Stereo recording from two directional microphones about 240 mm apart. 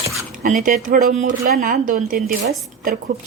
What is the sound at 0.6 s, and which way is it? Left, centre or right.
Speech, right.